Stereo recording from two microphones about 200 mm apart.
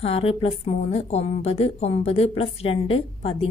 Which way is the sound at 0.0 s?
30° left (ahead or behind).